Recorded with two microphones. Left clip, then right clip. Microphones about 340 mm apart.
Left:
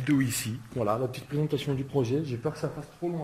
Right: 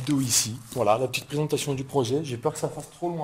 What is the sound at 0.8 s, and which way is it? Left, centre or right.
Speech, right.